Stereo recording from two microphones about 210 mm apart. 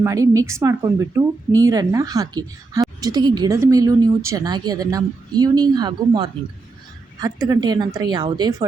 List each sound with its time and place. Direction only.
0.0 s speech: 15° right (ahead or behind)